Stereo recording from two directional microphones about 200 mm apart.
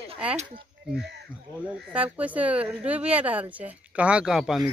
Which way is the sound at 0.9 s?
55° right (ahead or behind).